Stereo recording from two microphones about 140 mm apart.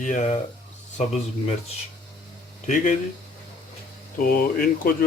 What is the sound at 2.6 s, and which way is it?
Speech, 65° left (ahead or behind).